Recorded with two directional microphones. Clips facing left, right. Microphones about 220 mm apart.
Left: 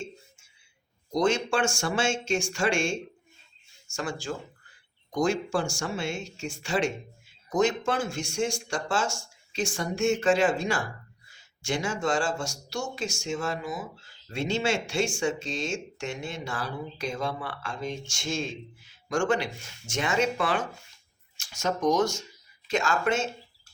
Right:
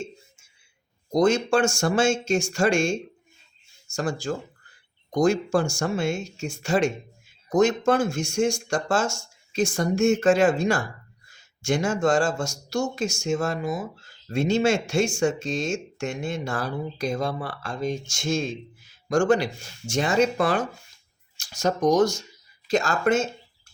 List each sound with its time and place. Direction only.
1.1 s speech: 40° right (ahead or behind)